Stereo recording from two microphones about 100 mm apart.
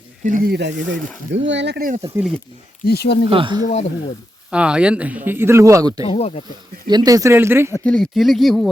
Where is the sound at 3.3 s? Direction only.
60° right (ahead or behind).